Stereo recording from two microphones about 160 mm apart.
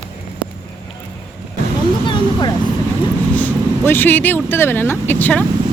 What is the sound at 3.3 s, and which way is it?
Speech, 10° left (ahead or behind).